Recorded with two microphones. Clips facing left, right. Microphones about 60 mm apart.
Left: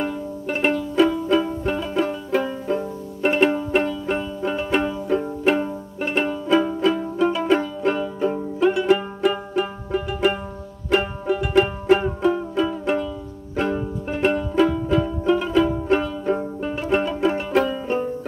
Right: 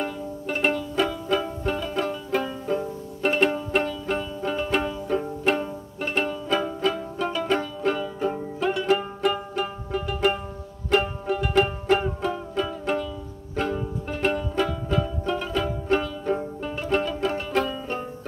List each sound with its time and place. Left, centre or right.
0.0 s music: centre